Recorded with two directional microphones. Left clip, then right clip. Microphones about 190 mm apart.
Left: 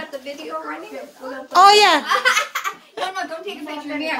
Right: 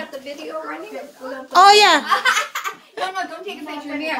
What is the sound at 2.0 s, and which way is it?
Speech, 10° left (ahead or behind).